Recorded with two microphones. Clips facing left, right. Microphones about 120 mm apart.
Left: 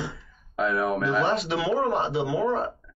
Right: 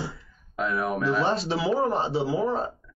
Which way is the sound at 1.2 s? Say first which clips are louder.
Even; 35° right (ahead or behind).